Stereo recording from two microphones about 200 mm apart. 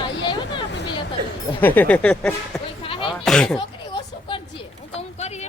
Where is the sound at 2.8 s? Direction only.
25° left (ahead or behind).